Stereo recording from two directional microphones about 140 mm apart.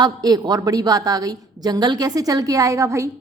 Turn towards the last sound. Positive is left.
turn(degrees=-20)  # may be behind; listen again after turning